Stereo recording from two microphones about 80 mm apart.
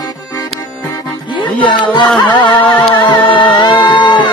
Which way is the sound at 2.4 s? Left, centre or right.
Left.